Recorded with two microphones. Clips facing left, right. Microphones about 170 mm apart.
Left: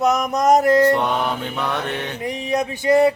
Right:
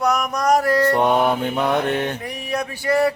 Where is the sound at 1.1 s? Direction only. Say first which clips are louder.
Right 5 dB; 50° right (ahead or behind).